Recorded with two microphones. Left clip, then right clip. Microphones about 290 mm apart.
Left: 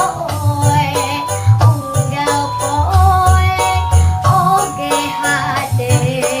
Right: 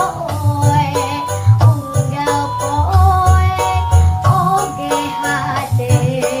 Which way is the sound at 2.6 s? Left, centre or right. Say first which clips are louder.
Left 2 dB; centre.